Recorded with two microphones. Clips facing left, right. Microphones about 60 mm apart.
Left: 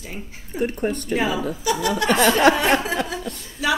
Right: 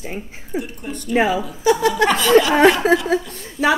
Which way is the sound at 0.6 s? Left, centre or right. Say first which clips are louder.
Left 7 dB; left.